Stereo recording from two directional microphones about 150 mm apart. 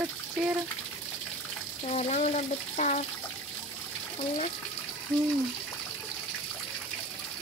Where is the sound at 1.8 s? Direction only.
45° left (ahead or behind).